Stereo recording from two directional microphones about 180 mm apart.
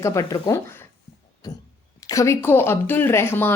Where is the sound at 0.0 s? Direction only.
15° left (ahead or behind).